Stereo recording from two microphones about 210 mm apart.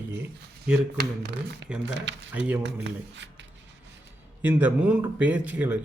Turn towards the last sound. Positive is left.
turn(degrees=-5)  # may be behind; listen again after turning